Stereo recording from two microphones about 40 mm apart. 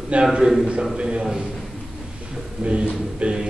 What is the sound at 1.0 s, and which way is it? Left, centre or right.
Speech, right.